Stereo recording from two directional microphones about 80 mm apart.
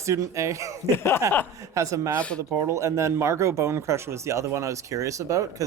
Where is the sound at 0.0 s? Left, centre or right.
Right.